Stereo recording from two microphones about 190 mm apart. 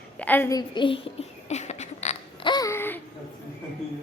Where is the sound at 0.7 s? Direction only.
25° left (ahead or behind).